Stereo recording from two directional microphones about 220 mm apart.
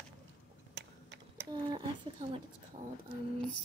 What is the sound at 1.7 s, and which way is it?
Speech, 20° right (ahead or behind).